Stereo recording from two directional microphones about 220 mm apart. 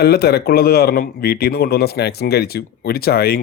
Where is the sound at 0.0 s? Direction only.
45° left (ahead or behind).